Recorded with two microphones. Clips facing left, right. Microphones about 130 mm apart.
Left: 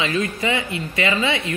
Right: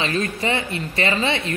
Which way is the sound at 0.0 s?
35° right (ahead or behind).